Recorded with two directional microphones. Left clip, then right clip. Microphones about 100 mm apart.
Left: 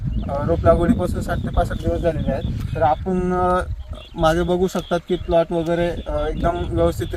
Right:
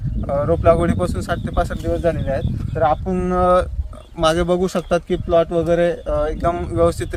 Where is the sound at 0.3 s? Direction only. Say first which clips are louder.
Right 2 dB; 10° right (ahead or behind).